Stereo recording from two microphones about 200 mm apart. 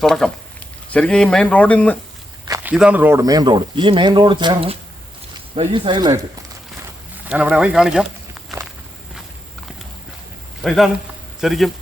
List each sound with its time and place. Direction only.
0.0 s speech: centre (ahead or behind)
2.7 s speech: 5° right (ahead or behind); by 6.1 s 20° right (ahead or behind)
7.3 s speech: 5° right (ahead or behind)
10.6 s speech: centre (ahead or behind)